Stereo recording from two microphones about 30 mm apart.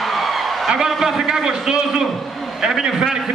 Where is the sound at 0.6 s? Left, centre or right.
Centre.